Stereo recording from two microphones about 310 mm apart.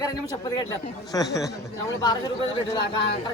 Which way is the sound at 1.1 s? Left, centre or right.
Centre.